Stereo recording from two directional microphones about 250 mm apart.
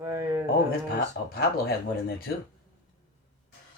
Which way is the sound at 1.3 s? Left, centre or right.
Left.